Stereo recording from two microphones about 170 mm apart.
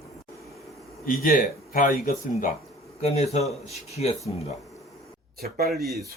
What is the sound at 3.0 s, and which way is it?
Speech, 40° left (ahead or behind).